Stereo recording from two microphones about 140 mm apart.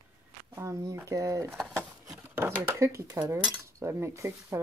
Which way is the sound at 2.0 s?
25° right (ahead or behind).